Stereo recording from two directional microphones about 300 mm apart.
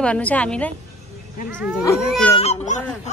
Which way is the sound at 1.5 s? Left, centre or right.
Centre.